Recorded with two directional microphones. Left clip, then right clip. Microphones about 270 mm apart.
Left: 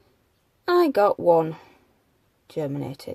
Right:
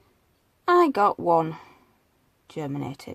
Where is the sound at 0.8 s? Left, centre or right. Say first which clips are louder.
Left 2 dB; centre.